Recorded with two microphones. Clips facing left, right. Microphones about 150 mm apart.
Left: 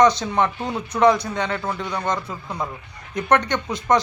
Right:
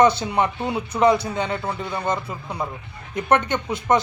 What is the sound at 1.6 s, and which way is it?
Speech, 25° right (ahead or behind).